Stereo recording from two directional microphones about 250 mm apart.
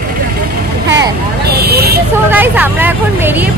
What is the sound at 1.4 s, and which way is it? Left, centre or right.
Vehicle, right.